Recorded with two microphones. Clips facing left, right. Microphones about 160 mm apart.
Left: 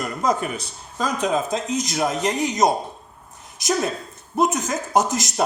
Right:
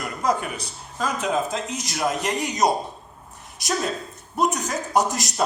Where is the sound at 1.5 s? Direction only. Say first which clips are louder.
Left 5 dB; 20° left (ahead or behind).